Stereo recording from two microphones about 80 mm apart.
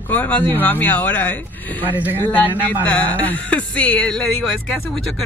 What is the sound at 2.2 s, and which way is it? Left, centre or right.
Speech, left.